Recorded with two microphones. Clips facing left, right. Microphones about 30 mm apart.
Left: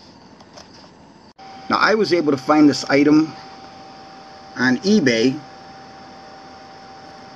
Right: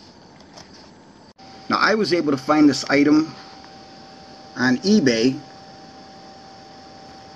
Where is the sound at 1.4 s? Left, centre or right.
Centre.